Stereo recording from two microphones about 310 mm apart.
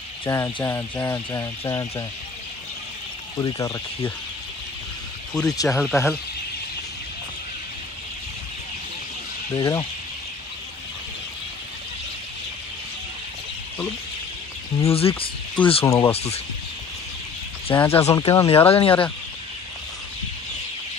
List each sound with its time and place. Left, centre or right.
0.2 s fowl: centre
3.3 s fowl: centre
5.3 s speech: centre
9.6 s fowl: centre
14.8 s fowl: centre
17.7 s fowl: centre